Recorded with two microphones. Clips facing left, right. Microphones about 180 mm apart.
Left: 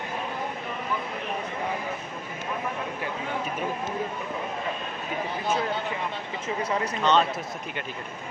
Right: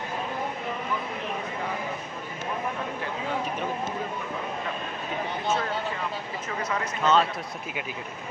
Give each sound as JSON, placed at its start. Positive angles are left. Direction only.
{"t": 6.6, "sound": "speech", "side_deg": 30}
{"t": 7.0, "sound": "speech", "side_deg": 0}